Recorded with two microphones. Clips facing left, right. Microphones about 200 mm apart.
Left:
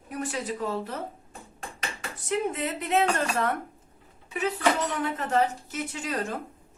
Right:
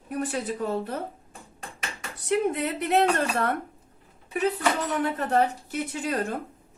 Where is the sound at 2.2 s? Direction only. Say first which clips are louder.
Right 4 dB; 65° right (ahead or behind).